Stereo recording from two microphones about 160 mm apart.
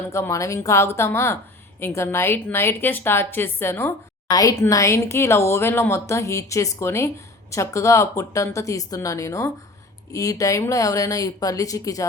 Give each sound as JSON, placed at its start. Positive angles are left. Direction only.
{"t": 0.1, "sound": "a woman's voice", "side_deg": 20}